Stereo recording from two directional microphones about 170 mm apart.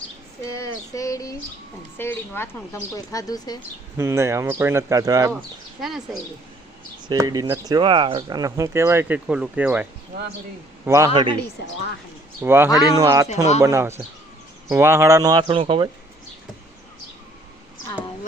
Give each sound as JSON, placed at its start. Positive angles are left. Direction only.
{"t": 0.5, "sound": "a sound", "side_deg": 20}
{"t": 2.0, "sound": "a woman's voice", "side_deg": 15}
{"t": 2.9, "sound": "a sound", "side_deg": 20}
{"t": 3.9, "sound": "speech", "side_deg": -15}
{"t": 7.1, "sound": "speech", "side_deg": -20}
{"t": 10.8, "sound": "speech", "side_deg": -15}
{"t": 11.1, "sound": "speech", "side_deg": -30}
{"t": 12.4, "sound": "speech", "side_deg": -15}